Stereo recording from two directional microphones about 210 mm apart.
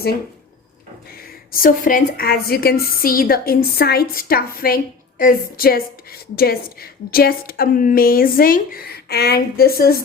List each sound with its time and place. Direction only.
1.5 s a woman's voice: 40° left (ahead or behind)